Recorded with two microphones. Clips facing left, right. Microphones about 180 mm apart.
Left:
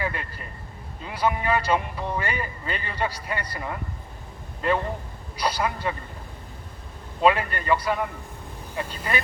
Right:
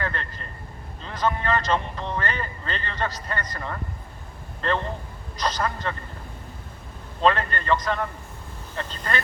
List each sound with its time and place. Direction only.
0.0 s a sound: 10° left (ahead or behind)
1.0 s speech: 10° left (ahead or behind)
7.2 s speech: 10° left (ahead or behind)